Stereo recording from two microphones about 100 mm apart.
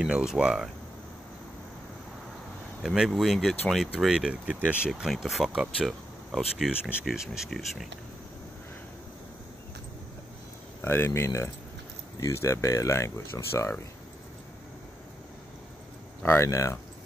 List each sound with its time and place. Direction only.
0.0 s speech: 5° right (ahead or behind)
2.8 s speech: 5° right (ahead or behind)
10.8 s speech: 25° left (ahead or behind)
16.2 s speech: 25° left (ahead or behind)